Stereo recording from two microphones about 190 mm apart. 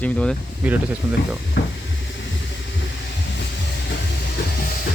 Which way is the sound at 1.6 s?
60° left (ahead or behind).